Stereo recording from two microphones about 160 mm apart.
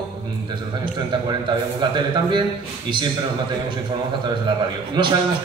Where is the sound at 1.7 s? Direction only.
30° right (ahead or behind).